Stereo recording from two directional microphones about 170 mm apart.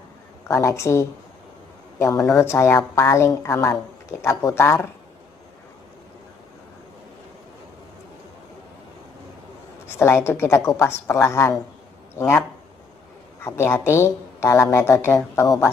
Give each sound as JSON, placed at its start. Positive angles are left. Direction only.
{"t": 0.4, "sound": "speech", "side_deg": 15}
{"t": 2.2, "sound": "speech", "side_deg": 15}
{"t": 9.8, "sound": "speech", "side_deg": 15}
{"t": 12.2, "sound": "speech", "side_deg": 5}